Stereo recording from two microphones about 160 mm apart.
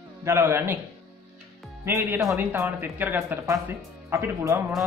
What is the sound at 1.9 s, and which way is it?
Speech, 15° right (ahead or behind).